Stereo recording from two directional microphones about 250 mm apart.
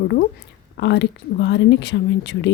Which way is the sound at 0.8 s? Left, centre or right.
Left.